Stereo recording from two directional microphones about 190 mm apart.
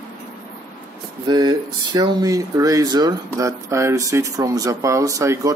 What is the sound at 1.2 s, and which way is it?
Speech, 20° right (ahead or behind).